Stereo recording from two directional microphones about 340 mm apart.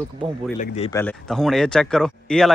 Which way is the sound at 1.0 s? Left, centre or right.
Centre.